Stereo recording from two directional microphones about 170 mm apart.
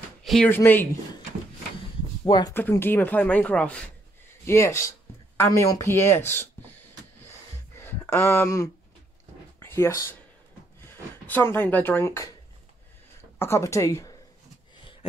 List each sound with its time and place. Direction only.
0.2 s a sound: centre (ahead or behind)
0.5 s speech: 10° left (ahead or behind)
2.2 s speech: 25° left (ahead or behind)
2.5 s speech: 15° left (ahead or behind)
5.4 s a sound: 15° left (ahead or behind)
9.6 s speech: 15° left (ahead or behind)
13.4 s speech: 15° left (ahead or behind)